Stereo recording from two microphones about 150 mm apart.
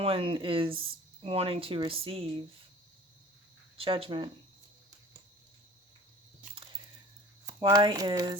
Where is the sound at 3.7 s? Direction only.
40° right (ahead or behind).